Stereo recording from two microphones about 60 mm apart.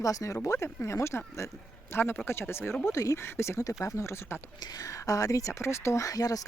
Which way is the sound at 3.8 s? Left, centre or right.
Left.